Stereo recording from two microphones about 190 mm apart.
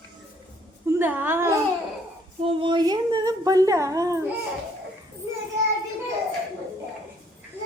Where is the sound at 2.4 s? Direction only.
25° right (ahead or behind).